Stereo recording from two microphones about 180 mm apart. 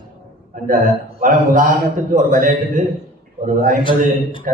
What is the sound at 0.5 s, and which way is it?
Speech, 45° right (ahead or behind).